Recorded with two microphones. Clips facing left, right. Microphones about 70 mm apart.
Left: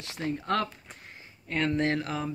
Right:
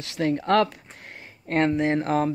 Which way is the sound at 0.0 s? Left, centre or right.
Right.